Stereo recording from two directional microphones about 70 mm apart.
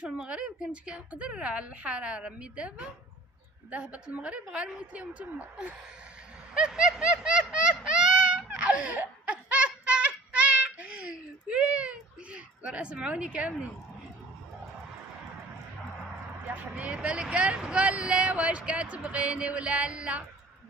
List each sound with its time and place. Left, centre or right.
0.0 s speech: centre
6.5 s a sound: centre
16.5 s speech: centre